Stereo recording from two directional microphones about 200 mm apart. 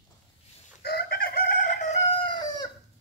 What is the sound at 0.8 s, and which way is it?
Chicken, 50° left (ahead or behind).